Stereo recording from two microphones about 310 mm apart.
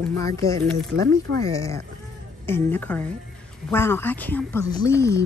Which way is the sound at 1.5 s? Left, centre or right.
Centre.